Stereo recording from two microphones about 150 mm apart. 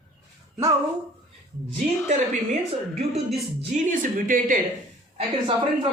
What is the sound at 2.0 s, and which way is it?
Speech, 55° right (ahead or behind).